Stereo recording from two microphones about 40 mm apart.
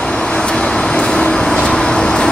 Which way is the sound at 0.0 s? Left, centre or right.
Centre.